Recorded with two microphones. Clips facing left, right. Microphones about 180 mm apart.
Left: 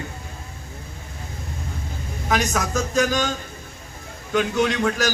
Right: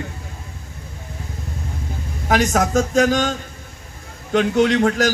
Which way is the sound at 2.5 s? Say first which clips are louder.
Right 6 dB; 55° right (ahead or behind).